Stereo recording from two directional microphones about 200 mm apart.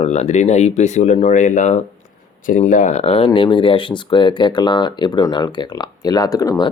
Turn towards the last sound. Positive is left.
turn(degrees=15)  # may be behind; listen again after turning